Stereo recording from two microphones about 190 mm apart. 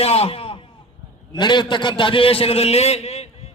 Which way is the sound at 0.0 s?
30° left (ahead or behind).